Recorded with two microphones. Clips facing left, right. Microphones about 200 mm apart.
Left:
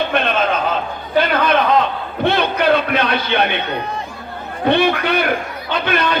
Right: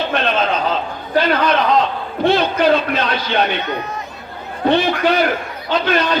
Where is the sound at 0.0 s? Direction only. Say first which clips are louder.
Left 1 dB; 55° left (ahead or behind).